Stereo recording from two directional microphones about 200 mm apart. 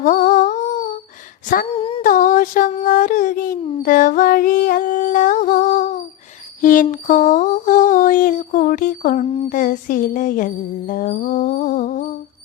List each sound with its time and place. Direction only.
0.0 s a sound: 45° left (ahead or behind)
2.0 s child singing: 45° left (ahead or behind)
6.6 s mantra: 40° left (ahead or behind)